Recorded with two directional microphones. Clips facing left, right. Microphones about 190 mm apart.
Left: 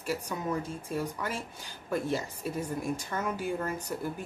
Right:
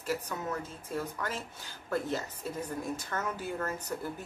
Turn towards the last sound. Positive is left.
turn(degrees=10)  # may be behind; listen again after turning